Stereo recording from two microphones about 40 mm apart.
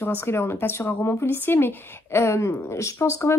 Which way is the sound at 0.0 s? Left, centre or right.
Left.